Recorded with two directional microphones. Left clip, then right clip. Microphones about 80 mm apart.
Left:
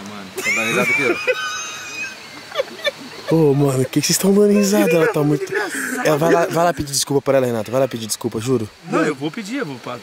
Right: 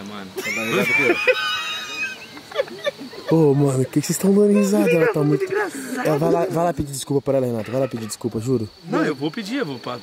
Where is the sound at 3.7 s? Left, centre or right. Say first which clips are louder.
Left 3 dB; centre.